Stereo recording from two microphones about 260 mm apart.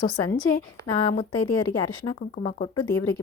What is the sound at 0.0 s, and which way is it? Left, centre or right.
Speech, centre.